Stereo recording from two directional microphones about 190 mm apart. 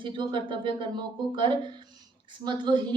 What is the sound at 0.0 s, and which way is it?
A woman's voice, 25° right (ahead or behind).